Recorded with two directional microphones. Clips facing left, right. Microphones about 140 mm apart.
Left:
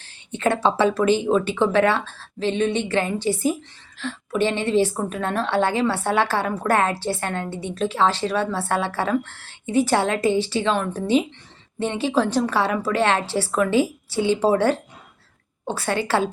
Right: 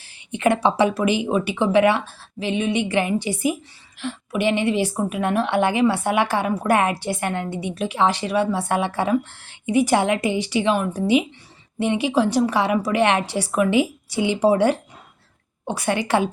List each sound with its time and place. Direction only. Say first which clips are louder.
0.0 s speech: right 2 dB; 15° right (ahead or behind)